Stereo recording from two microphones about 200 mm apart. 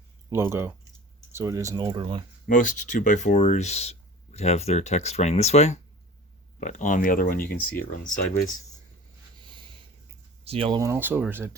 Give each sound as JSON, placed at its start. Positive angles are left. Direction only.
{"t": 0.3, "sound": "speech", "side_deg": -15}
{"t": 2.5, "sound": "speech", "side_deg": 40}
{"t": 10.4, "sound": "speech", "side_deg": -30}
{"t": 10.8, "sound": "speech", "side_deg": -15}